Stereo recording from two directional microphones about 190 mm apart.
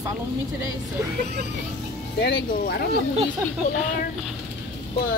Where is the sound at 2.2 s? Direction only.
60° left (ahead or behind).